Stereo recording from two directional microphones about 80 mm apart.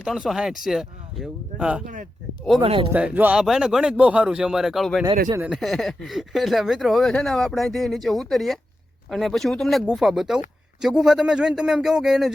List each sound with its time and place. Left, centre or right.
0.0 s speech: centre
1.5 s speech: centre
2.6 s speech: right
2.9 s speech: centre
3.3 s speech: centre